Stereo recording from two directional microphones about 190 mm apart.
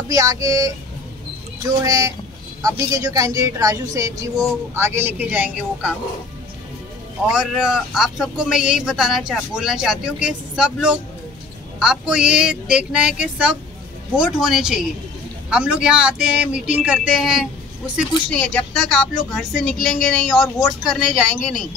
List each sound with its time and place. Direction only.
0.1 s speech: 20° right (ahead or behind)
1.8 s speech: 20° right (ahead or behind)
7.2 s speech: 5° right (ahead or behind)